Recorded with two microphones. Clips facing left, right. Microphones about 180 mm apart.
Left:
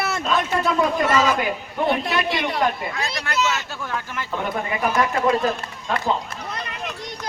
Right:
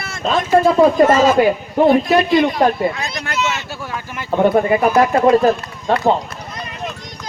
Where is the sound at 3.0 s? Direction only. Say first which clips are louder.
Right 2 dB; 30° left (ahead or behind).